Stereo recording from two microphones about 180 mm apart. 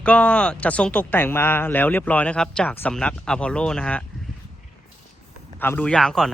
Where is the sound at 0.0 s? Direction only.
5° left (ahead or behind).